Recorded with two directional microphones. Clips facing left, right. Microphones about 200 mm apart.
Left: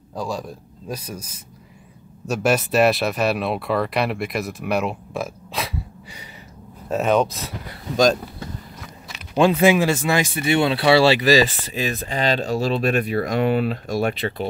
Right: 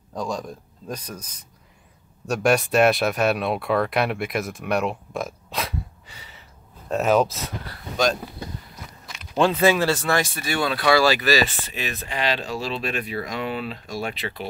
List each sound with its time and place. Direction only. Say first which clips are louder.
0.1 s speech: left 1 dB; 5° left (ahead or behind)
6.9 s speech: left 1 dB; centre (ahead or behind)
9.1 s speech: left 3 dB; 10° left (ahead or behind); by 14.4 s 50° left (ahead or behind)